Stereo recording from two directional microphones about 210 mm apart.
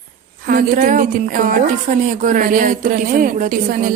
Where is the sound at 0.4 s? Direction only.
40° right (ahead or behind).